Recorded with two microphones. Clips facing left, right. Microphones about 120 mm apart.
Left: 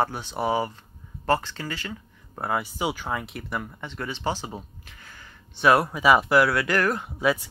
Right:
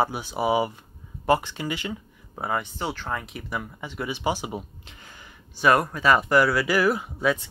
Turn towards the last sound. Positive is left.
turn(degrees=5)  # may be behind; listen again after turning